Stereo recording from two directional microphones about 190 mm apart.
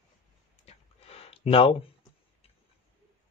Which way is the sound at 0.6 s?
30° left (ahead or behind).